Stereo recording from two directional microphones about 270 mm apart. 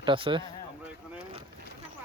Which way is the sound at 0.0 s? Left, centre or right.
Centre.